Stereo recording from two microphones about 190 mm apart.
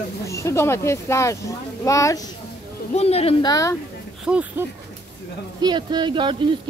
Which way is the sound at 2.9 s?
30° left (ahead or behind).